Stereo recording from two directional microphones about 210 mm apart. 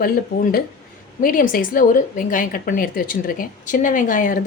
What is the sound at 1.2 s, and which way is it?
Speech, 40° left (ahead or behind).